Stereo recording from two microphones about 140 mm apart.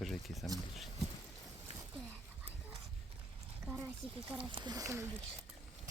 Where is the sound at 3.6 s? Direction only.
15° right (ahead or behind).